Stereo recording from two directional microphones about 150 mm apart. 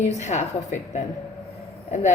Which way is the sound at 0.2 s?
50° left (ahead or behind).